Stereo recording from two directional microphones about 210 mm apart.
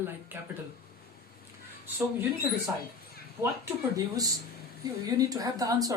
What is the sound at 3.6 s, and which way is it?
Speech, 15° right (ahead or behind).